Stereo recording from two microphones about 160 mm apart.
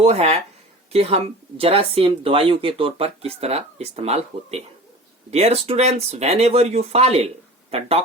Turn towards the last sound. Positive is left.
turn(degrees=-40)  # may be behind; listen again after turning